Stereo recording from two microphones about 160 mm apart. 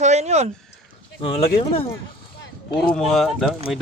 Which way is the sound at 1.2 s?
35° left (ahead or behind).